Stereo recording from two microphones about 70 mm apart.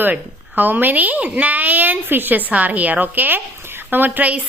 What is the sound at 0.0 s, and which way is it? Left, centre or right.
A woman's voice, right.